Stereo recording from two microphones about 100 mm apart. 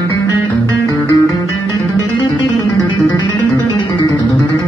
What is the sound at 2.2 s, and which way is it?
Music, 40° left (ahead or behind).